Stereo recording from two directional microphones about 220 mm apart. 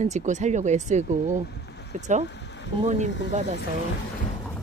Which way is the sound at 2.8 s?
30° right (ahead or behind).